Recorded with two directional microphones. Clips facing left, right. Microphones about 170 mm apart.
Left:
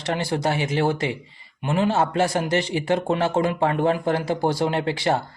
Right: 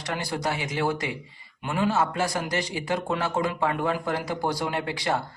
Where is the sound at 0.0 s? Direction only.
25° left (ahead or behind).